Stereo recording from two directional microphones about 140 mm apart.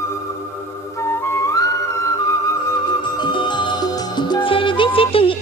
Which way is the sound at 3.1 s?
35° left (ahead or behind).